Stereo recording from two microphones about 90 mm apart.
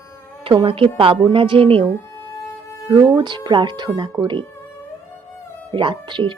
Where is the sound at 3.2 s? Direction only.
55° right (ahead or behind).